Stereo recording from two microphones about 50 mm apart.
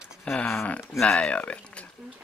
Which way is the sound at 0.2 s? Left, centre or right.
Centre.